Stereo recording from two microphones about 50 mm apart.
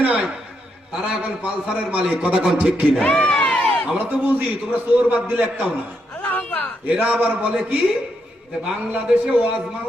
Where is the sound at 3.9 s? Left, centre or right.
Right.